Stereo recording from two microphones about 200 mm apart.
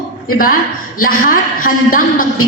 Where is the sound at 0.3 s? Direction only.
45° left (ahead or behind).